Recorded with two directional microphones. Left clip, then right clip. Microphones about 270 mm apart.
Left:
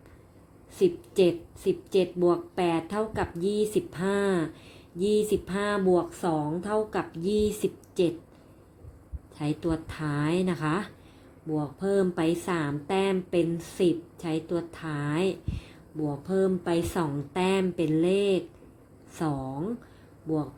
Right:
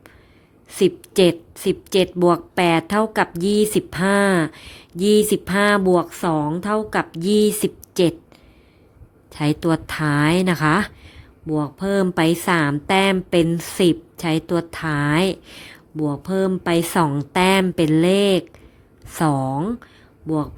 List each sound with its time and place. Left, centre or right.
0.8 s a woman's voice: right
9.3 s a woman's voice: right